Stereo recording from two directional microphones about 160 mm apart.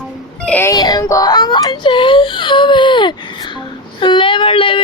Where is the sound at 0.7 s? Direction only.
25° left (ahead or behind).